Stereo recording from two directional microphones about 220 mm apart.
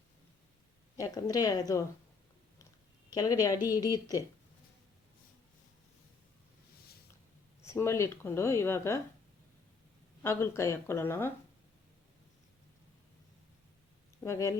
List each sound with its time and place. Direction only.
0.9 s speech: 15° left (ahead or behind)
3.1 s speech: 15° left (ahead or behind)
7.6 s speech: 10° left (ahead or behind)
10.2 s speech: 10° left (ahead or behind)
14.3 s speech: 15° left (ahead or behind)